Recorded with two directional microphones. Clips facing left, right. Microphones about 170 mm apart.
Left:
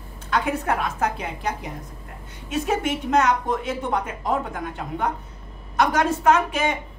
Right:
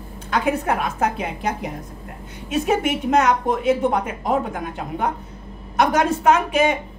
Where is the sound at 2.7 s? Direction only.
15° right (ahead or behind).